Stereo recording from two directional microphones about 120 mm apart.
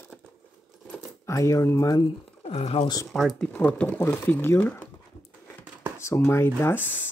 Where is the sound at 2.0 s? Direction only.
50° left (ahead or behind).